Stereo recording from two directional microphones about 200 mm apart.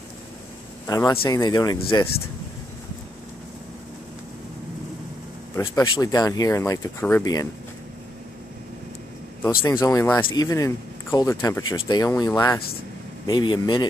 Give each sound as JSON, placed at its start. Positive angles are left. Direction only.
{"t": 0.8, "sound": "speech", "side_deg": 20}
{"t": 5.6, "sound": "speech", "side_deg": 20}
{"t": 9.4, "sound": "speech", "side_deg": 15}